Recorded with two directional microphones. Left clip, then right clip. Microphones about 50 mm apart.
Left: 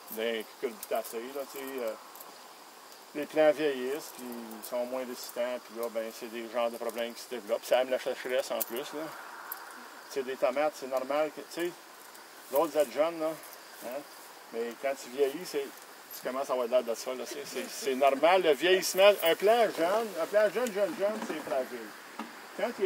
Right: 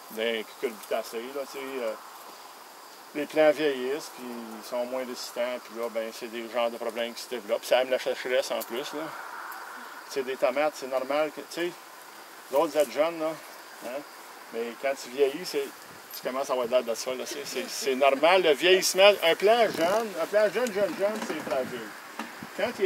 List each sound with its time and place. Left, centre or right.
0.2 s speech: centre
3.2 s speech: centre
10.1 s speech: centre
14.5 s speech: centre
21.1 s speech: right
22.1 s bee: right